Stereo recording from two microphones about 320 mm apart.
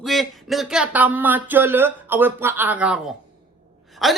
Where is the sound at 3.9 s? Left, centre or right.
Centre.